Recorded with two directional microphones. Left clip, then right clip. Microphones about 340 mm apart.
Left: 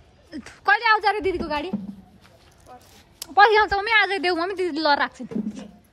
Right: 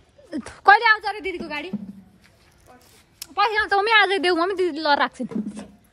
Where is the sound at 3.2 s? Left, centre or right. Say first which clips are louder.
Left 6 dB; centre.